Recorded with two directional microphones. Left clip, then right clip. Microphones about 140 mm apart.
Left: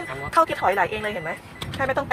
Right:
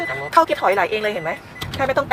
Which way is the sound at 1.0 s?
15° right (ahead or behind).